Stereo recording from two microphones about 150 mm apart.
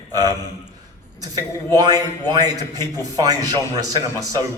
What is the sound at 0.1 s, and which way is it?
A man's voice, 25° right (ahead or behind).